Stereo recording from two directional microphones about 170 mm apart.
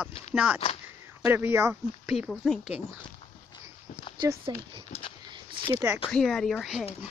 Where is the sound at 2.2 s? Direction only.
Centre (ahead or behind).